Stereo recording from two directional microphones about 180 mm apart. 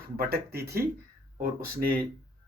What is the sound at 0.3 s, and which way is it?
Speech, 60° right (ahead or behind).